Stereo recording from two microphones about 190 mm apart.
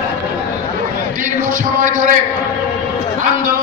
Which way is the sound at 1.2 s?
45° right (ahead or behind).